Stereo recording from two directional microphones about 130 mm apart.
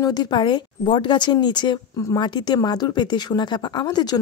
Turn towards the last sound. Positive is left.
turn(degrees=30)  # may be behind; listen again after turning